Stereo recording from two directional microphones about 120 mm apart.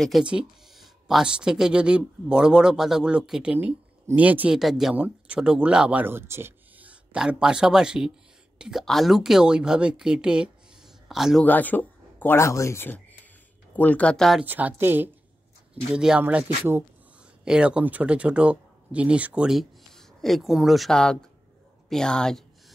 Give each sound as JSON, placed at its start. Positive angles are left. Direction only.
{"t": 0.0, "sound": "a woman's voice", "side_deg": -5}
{"t": 11.4, "sound": "speech", "side_deg": 15}
{"t": 14.4, "sound": "a woman's voice", "side_deg": -15}